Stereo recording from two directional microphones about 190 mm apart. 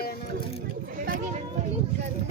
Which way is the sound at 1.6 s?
35° right (ahead or behind).